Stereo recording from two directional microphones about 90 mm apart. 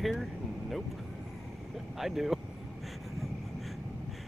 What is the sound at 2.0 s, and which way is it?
Speech, 5° right (ahead or behind).